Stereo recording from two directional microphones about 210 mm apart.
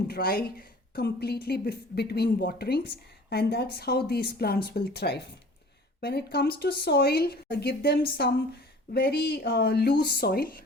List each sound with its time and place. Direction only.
0.1 s a woman's voice: 45° left (ahead or behind)